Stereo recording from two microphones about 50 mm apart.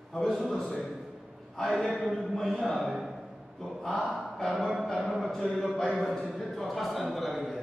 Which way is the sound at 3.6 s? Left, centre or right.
Centre.